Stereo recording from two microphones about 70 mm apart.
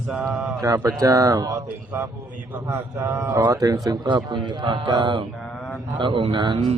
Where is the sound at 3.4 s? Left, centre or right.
Right.